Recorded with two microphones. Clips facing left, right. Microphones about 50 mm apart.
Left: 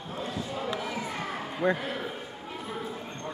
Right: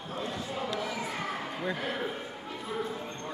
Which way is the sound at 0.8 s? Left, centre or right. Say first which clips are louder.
Left 1 dB; centre.